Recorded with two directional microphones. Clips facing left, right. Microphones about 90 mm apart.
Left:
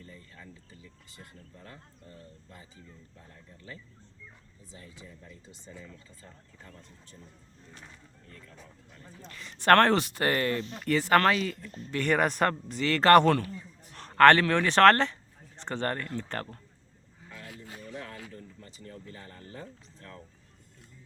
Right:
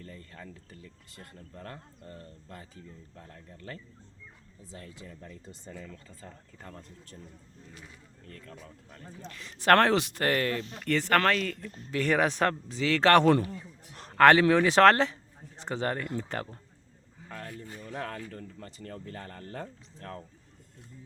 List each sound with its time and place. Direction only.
0.0 s speech: 65° right (ahead or behind)
9.2 s a man's voice: centre (ahead or behind)
17.2 s a sound: 50° right (ahead or behind)
17.9 s speech: 50° right (ahead or behind)
18.3 s speech: 65° right (ahead or behind)